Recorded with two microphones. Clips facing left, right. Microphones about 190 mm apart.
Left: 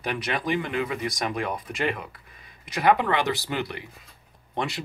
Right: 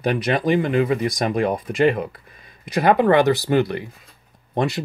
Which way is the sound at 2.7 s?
45° right (ahead or behind).